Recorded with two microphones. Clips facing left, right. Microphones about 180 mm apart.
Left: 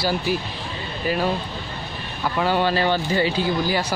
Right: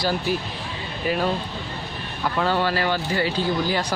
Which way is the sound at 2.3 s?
15° left (ahead or behind).